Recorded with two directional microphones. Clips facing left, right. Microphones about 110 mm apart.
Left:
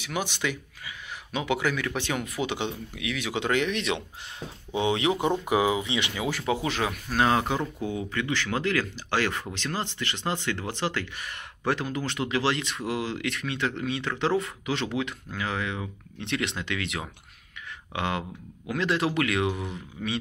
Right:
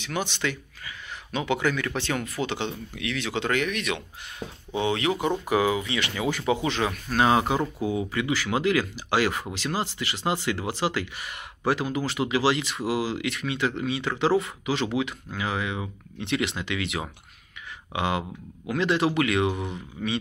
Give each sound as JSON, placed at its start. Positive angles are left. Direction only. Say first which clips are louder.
{"t": 0.0, "sound": "speech", "louder": "right 1 dB", "side_deg": 10}
{"t": 4.4, "sound": "speech", "louder": "right 3 dB", "side_deg": -10}
{"t": 4.7, "sound": "speech", "louder": "even", "side_deg": 15}
{"t": 6.1, "sound": "a man's voice", "louder": "right 5 dB", "side_deg": 0}
{"t": 7.2, "sound": "a man's voice", "louder": "right 4 dB", "side_deg": -10}